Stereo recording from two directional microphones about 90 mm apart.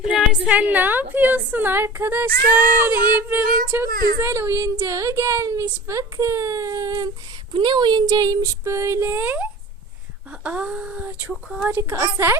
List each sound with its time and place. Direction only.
0.0 s a woman's voice: 10° right (ahead or behind); by 7.1 s 40° right (ahead or behind)
7.5 s speech: 60° right (ahead or behind)
8.0 s speech: 45° right (ahead or behind); by 11.7 s 10° right (ahead or behind)
11.9 s speech: 40° right (ahead or behind)